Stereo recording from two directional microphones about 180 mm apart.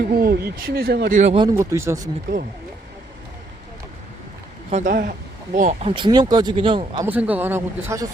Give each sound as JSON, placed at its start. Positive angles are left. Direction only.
{"t": 0.1, "sound": "speech", "side_deg": -55}
{"t": 1.2, "sound": "speech", "side_deg": -30}
{"t": 1.5, "sound": "speech", "side_deg": -15}
{"t": 4.7, "sound": "speech", "side_deg": -50}
{"t": 5.5, "sound": "speech", "side_deg": -40}
{"t": 5.9, "sound": "speech", "side_deg": -25}
{"t": 7.1, "sound": "speech", "side_deg": -10}